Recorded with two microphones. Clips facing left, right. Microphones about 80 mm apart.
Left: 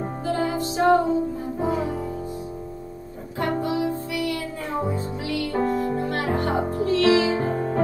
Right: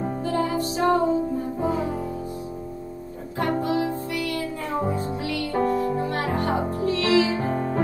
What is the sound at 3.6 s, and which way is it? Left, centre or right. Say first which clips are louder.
Music: even; right.